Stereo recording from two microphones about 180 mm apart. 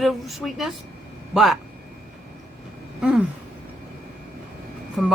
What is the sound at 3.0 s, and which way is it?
Speech, 5° right (ahead or behind).